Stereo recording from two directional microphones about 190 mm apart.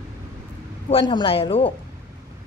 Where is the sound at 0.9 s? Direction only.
25° left (ahead or behind).